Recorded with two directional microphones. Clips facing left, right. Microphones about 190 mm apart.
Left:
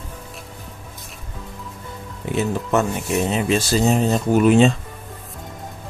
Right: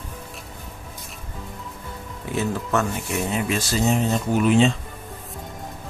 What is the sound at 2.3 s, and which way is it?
Speech, 20° left (ahead or behind).